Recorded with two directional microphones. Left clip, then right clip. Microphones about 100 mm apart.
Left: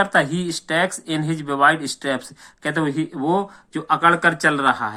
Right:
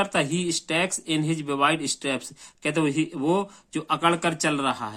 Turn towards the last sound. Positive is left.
turn(degrees=-35)  # may be behind; listen again after turning